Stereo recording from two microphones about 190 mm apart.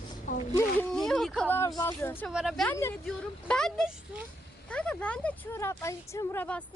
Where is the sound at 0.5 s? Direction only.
5° left (ahead or behind).